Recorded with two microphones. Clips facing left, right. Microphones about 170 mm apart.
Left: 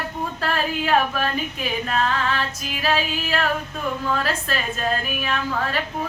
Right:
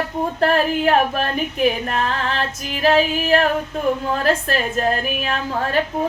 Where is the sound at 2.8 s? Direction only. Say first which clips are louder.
Right 7 dB; 50° right (ahead or behind).